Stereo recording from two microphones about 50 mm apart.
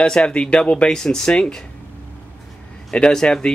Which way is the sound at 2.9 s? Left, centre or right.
Centre.